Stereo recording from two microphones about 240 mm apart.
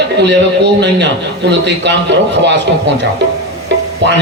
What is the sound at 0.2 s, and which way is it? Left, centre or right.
A man's voice, right.